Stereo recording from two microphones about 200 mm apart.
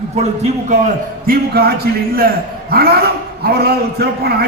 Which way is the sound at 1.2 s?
50° right (ahead or behind).